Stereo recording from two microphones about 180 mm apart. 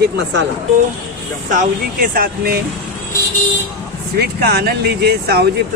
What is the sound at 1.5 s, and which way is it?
Speech, 50° right (ahead or behind).